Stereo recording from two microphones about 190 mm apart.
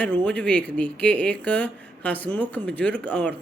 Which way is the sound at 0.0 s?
5° left (ahead or behind).